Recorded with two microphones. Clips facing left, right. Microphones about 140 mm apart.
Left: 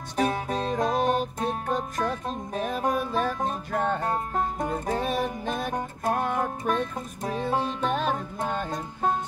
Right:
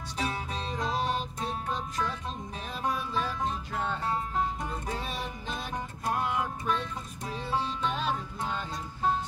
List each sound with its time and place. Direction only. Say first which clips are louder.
0.2 s music: left 8 dB; 50° left (ahead or behind)